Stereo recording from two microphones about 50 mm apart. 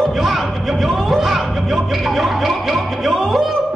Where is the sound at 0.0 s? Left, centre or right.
Centre.